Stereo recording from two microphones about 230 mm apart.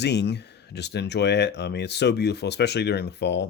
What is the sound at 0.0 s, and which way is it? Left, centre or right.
Speech, left.